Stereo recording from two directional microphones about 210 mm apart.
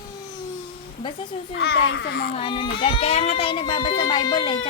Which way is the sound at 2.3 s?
25° left (ahead or behind).